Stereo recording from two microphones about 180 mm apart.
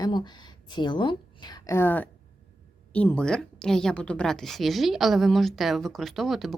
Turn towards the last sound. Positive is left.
turn(degrees=0)  # may be behind; listen again after turning